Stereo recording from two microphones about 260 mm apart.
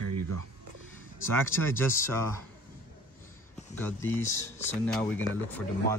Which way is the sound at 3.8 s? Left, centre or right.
Centre.